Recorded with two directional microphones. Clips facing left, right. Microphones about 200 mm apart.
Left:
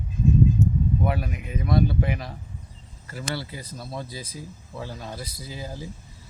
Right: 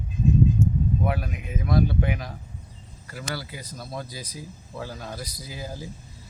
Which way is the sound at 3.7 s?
Centre (ahead or behind).